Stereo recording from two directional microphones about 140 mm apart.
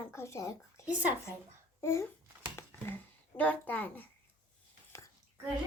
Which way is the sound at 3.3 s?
10° left (ahead or behind).